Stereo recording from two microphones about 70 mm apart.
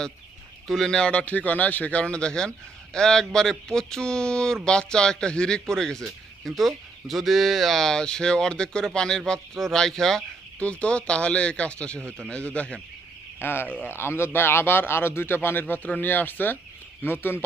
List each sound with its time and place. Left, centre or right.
0.7 s speech: centre
10.6 s speech: centre
13.4 s a man's voice: left